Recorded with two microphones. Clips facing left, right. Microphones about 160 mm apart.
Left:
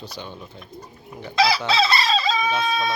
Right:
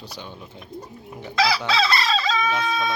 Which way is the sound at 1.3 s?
20° left (ahead or behind).